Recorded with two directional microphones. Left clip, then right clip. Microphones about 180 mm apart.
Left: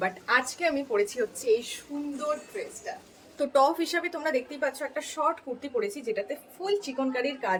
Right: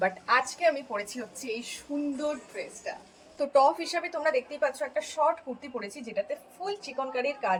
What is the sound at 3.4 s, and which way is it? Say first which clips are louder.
A woman's voice: even; 25° left (ahead or behind).